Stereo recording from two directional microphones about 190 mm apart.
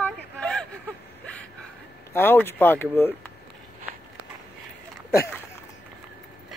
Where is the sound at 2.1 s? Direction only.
10° left (ahead or behind).